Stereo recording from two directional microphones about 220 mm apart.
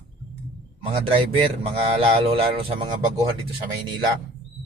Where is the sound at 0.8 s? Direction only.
25° right (ahead or behind).